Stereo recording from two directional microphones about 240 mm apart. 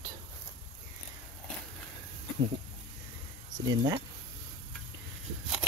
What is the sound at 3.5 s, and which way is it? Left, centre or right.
Speech, centre.